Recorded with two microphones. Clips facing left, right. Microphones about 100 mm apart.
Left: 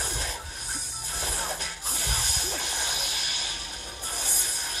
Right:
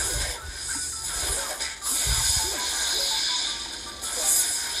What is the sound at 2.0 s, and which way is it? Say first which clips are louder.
Music: right 1 dB; 15° right (ahead or behind).